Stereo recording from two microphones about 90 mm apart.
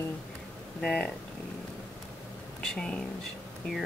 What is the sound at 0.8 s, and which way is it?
Speech, 5° left (ahead or behind).